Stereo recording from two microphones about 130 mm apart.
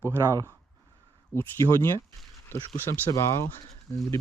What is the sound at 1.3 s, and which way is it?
Speech, 20° left (ahead or behind).